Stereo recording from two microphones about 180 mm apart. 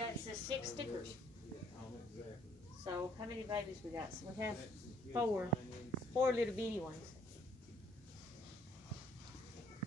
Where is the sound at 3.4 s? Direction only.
20° right (ahead or behind).